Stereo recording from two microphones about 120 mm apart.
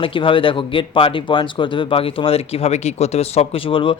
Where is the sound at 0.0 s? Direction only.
45° left (ahead or behind).